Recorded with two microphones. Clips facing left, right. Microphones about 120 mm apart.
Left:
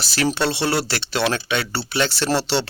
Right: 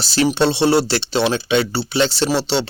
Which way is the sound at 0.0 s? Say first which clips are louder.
Right 5 dB; 30° right (ahead or behind).